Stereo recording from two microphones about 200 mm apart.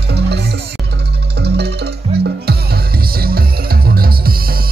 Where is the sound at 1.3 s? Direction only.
55° right (ahead or behind).